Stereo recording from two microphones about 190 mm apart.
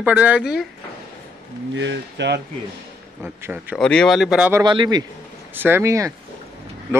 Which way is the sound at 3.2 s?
10° right (ahead or behind).